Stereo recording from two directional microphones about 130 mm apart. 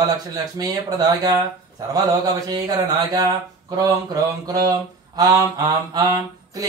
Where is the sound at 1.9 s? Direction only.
30° right (ahead or behind).